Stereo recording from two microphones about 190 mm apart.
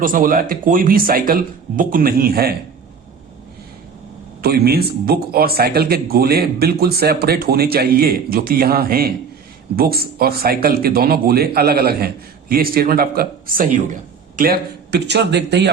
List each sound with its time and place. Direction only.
0.0 s speech: 45° right (ahead or behind)
4.4 s a man's voice: 55° right (ahead or behind)